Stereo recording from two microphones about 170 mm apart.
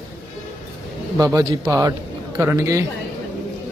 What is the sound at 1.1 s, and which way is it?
A man's voice, 20° right (ahead or behind).